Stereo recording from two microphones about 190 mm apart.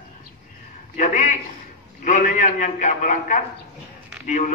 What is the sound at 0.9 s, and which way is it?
A man's voice, 40° left (ahead or behind).